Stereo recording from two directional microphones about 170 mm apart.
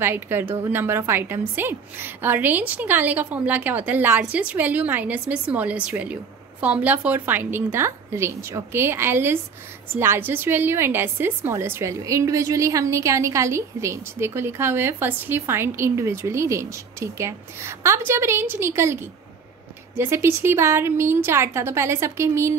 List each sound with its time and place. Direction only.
0.0 s a woman's voice: 15° right (ahead or behind)